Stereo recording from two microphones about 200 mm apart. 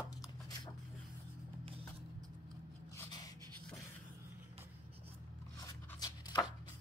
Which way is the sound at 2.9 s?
15° left (ahead or behind).